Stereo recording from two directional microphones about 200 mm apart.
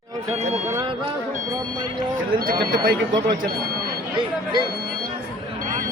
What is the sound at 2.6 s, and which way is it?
Speech, 20° right (ahead or behind).